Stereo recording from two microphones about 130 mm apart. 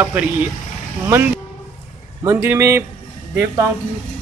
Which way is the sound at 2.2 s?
20° right (ahead or behind).